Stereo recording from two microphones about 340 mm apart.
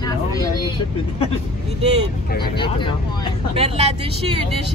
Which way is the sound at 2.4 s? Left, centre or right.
Centre.